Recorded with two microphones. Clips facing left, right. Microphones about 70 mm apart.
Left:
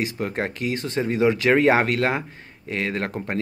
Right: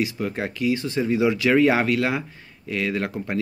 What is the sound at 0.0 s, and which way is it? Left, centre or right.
Speech, left.